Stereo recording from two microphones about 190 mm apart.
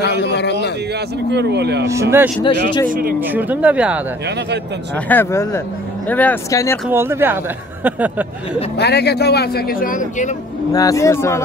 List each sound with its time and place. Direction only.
0.2 s speech: 65° left (ahead or behind)
1.3 s speech: 60° right (ahead or behind)
1.9 s speech: 15° right (ahead or behind)
2.4 s a man's voice: 25° left (ahead or behind)
2.9 s speech: 50° right (ahead or behind)
3.2 s speech: 10° right (ahead or behind)
4.9 s speech: 10° left (ahead or behind)
6.9 s speech: 10° right (ahead or behind)
8.7 s speech: 60° left (ahead or behind); by 10.3 s 45° left (ahead or behind)
10.7 s speech: 20° left (ahead or behind)